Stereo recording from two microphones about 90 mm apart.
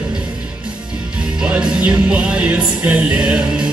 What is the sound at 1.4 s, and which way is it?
Music, 15° right (ahead or behind).